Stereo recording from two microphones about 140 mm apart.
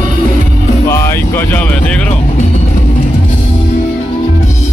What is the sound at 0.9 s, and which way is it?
Music, 20° left (ahead or behind).